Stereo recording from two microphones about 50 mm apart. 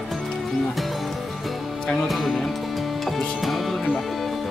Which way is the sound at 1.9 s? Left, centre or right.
Centre.